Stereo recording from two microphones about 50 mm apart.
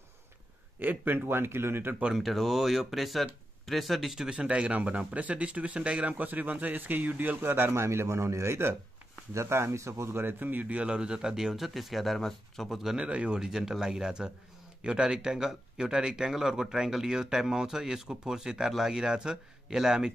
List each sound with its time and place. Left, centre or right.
0.7 s a man's voice: right
2.1 s speech: centre
4.3 s speech: right
7.4 s a man's voice: right
7.7 s a man's voice: right
10.2 s speech: right
10.8 s speech: centre
13.0 s speech: right
13.4 s speech: centre